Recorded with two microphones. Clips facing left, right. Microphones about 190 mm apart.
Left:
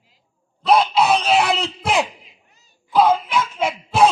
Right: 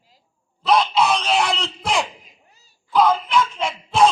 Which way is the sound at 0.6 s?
5° left (ahead or behind).